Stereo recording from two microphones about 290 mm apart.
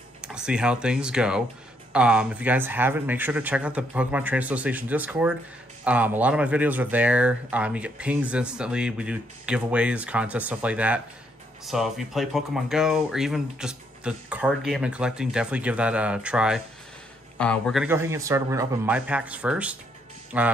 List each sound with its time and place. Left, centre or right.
0.2 s speech: centre